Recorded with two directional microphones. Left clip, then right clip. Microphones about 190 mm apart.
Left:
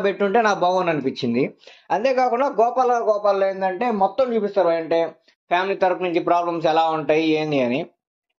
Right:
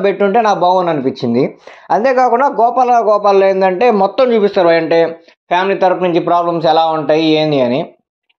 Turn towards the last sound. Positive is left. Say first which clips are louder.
# right 9 dB
turn(degrees=-30)  # may be behind; listen again after turning